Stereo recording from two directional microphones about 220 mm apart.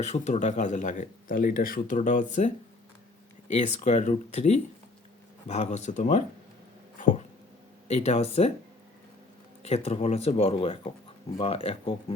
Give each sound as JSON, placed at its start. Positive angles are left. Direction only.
{"t": 0.0, "sound": "speech", "side_deg": 30}
{"t": 3.5, "sound": "speech", "side_deg": 35}
{"t": 7.9, "sound": "speech", "side_deg": 30}
{"t": 9.6, "sound": "speech", "side_deg": 30}